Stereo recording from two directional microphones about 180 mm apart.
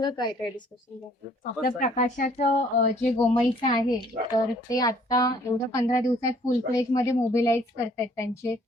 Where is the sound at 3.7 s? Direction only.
25° left (ahead or behind).